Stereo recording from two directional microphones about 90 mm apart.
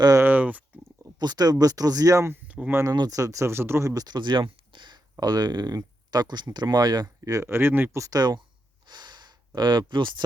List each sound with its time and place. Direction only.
0.2 s a sound: 20° right (ahead or behind)
1.0 s speech: 50° right (ahead or behind); by 2.4 s 30° right (ahead or behind)
2.5 s a sound: 15° right (ahead or behind)
2.9 s speech: 55° right (ahead or behind)
3.2 s speech: 35° right (ahead or behind); by 4.9 s 60° right (ahead or behind)
5.1 s speech: 50° right (ahead or behind)
7.2 s speech: 40° right (ahead or behind)
7.4 s speech: 25° right (ahead or behind)
8.0 s speech: 45° right (ahead or behind)
8.9 s snort: 55° right (ahead or behind)
9.6 s speech: 55° right (ahead or behind)